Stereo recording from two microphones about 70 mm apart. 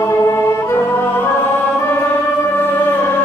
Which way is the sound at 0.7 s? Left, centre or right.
Left.